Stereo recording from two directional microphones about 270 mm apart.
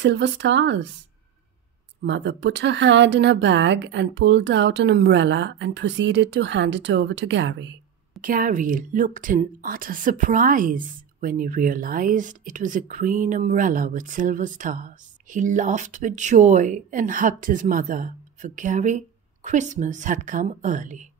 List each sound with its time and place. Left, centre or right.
0.0 s speech: right
2.0 s speech: right
8.2 s a woman's voice: right